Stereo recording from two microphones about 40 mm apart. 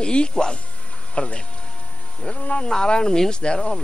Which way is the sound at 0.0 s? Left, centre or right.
Left.